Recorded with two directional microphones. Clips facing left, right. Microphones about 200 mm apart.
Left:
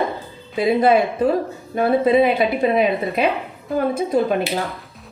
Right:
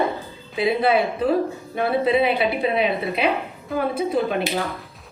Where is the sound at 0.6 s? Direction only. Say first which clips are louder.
Left 4 dB; 45° left (ahead or behind).